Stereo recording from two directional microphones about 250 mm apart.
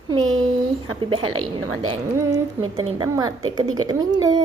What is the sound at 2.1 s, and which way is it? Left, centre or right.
Speech, centre.